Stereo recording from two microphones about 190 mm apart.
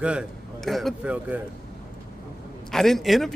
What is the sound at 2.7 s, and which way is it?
Speech, centre (ahead or behind).